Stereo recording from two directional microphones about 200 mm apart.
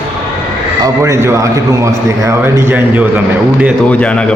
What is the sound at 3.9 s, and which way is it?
Speech, 5° left (ahead or behind).